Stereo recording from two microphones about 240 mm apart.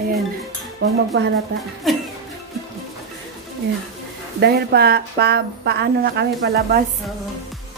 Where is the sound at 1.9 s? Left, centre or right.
Centre.